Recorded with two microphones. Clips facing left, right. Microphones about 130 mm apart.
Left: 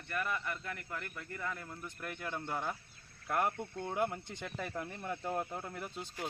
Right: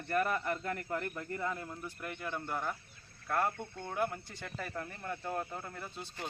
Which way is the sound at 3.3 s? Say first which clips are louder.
Even; 15° left (ahead or behind).